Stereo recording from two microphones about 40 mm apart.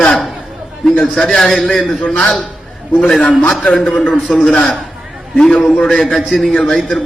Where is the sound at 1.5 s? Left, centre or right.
Centre.